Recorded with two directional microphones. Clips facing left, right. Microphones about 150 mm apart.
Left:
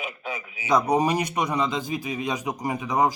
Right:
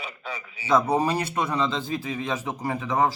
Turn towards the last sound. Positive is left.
turn(degrees=15)  # may be behind; listen again after turning